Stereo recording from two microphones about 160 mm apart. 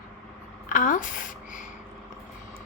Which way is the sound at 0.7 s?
55° left (ahead or behind).